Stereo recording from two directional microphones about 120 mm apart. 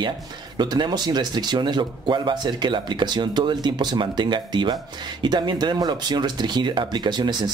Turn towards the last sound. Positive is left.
turn(degrees=-35)  # may be behind; listen again after turning